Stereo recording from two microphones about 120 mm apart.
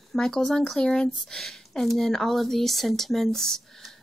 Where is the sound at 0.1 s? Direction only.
5° left (ahead or behind).